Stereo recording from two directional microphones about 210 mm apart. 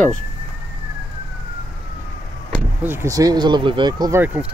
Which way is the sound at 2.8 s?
10° right (ahead or behind).